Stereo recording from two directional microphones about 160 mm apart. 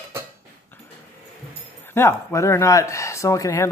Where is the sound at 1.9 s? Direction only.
15° left (ahead or behind).